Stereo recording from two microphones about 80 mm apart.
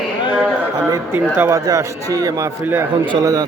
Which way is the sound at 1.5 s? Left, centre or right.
Right.